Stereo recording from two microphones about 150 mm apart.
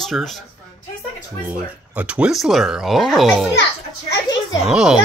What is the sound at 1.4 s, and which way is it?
Speech, 10° right (ahead or behind).